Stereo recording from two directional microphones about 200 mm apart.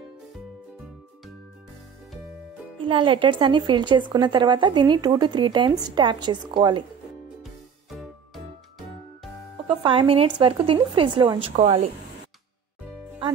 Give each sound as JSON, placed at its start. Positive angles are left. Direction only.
{"t": 2.8, "sound": "speech", "side_deg": -25}
{"t": 9.7, "sound": "speech", "side_deg": -25}